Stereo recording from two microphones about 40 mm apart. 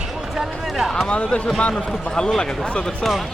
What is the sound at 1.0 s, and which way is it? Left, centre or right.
Speech, left.